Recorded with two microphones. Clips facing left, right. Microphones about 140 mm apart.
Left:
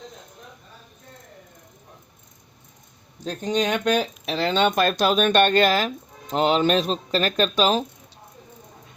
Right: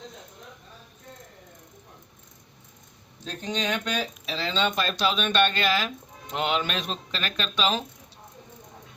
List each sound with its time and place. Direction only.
3.2 s speech: 45° left (ahead or behind)